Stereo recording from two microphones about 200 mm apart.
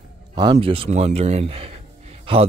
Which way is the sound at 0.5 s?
25° right (ahead or behind).